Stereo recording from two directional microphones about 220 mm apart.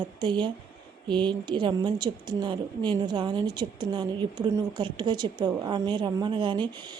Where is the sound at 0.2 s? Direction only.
20° right (ahead or behind).